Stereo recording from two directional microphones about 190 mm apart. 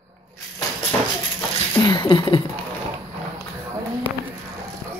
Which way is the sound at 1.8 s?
25° left (ahead or behind).